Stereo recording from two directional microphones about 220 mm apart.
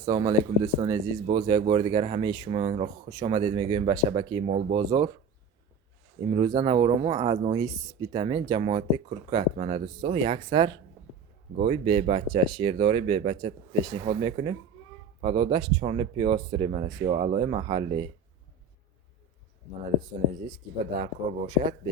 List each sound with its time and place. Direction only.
0.0 s speech: 15° right (ahead or behind)
6.3 s speech: 20° right (ahead or behind)
20.5 s speech: 25° right (ahead or behind)